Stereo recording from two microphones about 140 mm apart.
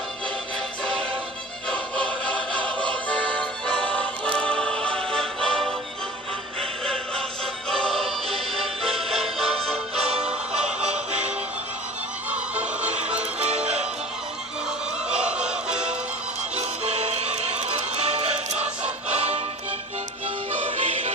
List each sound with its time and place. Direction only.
1.7 s music: 5° left (ahead or behind)
10.1 s music: 45° right (ahead or behind)
12.8 s music: 50° right (ahead or behind)
15.2 s music: 5° right (ahead or behind)
16.6 s music: 50° right (ahead or behind)
20.7 s music: 50° right (ahead or behind)